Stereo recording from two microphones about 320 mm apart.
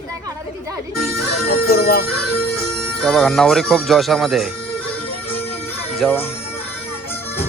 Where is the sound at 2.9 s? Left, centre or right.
Centre.